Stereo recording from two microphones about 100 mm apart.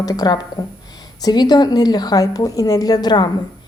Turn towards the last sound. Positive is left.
turn(degrees=45)  # may be behind; listen again after turning